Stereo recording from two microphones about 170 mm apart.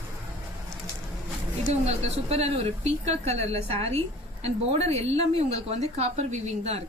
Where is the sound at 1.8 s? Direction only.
40° right (ahead or behind).